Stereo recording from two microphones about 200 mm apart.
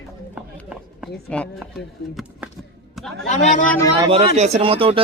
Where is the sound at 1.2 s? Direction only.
5° left (ahead or behind).